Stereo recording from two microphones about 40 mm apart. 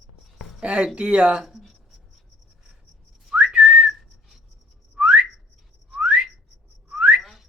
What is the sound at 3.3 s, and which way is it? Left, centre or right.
Whistling, right.